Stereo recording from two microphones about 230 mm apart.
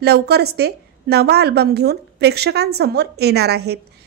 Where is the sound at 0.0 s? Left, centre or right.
Right.